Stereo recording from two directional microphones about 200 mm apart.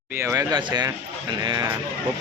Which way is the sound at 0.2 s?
15° right (ahead or behind).